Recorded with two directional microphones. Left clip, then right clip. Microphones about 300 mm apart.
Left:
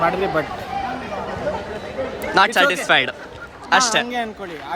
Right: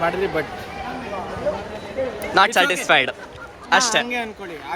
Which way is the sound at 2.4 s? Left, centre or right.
Centre.